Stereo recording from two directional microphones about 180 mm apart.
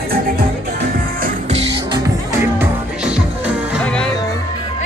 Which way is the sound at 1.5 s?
30° right (ahead or behind).